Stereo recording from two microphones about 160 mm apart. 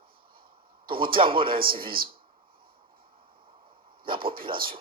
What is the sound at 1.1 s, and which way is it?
Speech, 35° right (ahead or behind).